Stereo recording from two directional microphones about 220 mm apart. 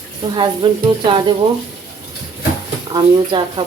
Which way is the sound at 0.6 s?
20° right (ahead or behind).